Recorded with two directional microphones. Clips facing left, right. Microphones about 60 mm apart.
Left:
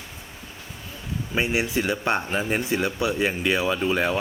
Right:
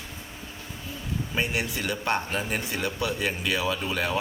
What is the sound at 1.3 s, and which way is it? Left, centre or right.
Speech, left.